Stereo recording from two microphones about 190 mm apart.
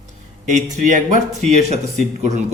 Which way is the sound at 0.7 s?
40° right (ahead or behind).